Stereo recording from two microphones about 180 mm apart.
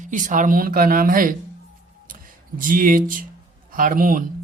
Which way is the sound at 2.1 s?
50° right (ahead or behind).